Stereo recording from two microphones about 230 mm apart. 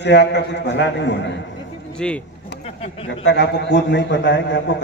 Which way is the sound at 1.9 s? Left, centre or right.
Centre.